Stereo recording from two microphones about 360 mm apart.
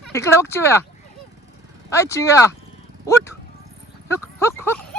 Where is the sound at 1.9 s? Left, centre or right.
Centre.